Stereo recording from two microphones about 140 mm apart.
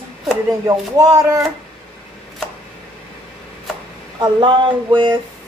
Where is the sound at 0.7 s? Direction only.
25° right (ahead or behind).